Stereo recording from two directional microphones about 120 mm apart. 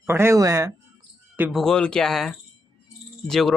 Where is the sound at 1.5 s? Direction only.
5° left (ahead or behind).